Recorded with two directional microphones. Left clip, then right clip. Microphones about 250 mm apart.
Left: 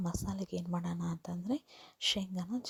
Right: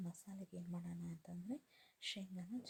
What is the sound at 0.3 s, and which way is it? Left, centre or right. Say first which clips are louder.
Speech: left 15 dB; left.